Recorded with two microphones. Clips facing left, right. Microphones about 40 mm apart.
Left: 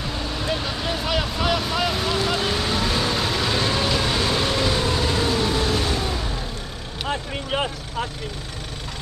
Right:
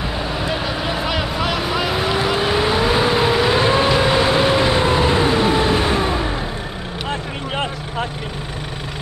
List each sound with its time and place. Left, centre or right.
0.2 s vehicle: centre